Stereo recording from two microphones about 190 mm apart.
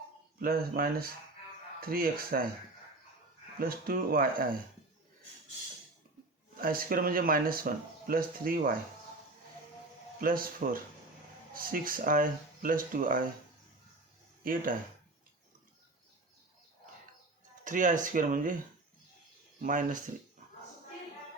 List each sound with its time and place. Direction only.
0.3 s speech: 50° right (ahead or behind)
3.6 s speech: 50° right (ahead or behind)
6.6 s speech: 50° right (ahead or behind)
10.2 s speech: 50° right (ahead or behind)
14.4 s speech: 45° right (ahead or behind)
17.6 s speech: 45° right (ahead or behind)
19.6 s speech: 45° right (ahead or behind)